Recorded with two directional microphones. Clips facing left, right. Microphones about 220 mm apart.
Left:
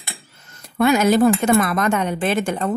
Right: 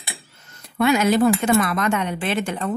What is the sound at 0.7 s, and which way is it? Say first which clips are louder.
Speech: left 2 dB; 45° left (ahead or behind).